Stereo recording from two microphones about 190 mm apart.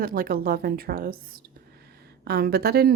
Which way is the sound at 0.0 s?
50° right (ahead or behind).